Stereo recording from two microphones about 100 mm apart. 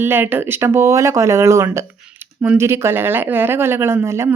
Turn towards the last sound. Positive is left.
turn(degrees=-25)  # may be behind; listen again after turning